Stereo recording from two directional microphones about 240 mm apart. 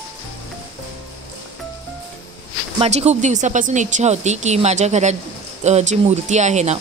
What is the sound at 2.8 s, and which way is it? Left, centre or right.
Speech, right.